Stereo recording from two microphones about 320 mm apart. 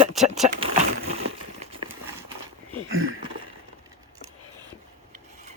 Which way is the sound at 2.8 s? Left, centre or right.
Right.